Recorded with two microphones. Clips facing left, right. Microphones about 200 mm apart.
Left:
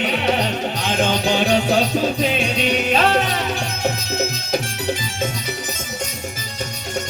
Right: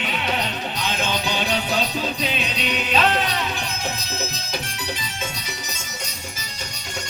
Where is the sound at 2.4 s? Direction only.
45° left (ahead or behind).